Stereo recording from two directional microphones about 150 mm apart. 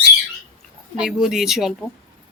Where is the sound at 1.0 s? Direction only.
5° right (ahead or behind).